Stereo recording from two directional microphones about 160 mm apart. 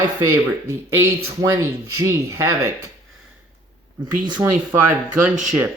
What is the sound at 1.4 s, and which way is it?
Speech, 20° right (ahead or behind).